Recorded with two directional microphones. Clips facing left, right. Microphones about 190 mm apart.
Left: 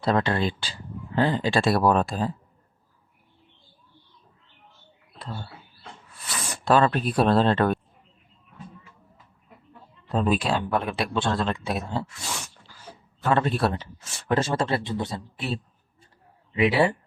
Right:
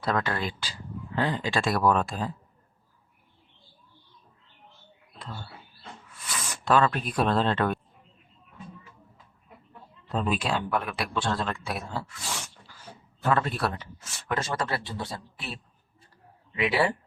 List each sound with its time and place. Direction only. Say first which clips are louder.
0.0 s speech: left 5 dB; 25° left (ahead or behind)
5.2 s a sound: left 4 dB; 35° left (ahead or behind)
6.1 s speech: left 3 dB; 35° left (ahead or behind)
10.1 s speech: left 4 dB; 35° left (ahead or behind)
13.3 s speech: left 5 dB; 25° left (ahead or behind)